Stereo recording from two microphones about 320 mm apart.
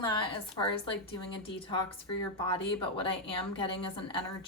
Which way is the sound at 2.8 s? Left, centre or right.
Centre.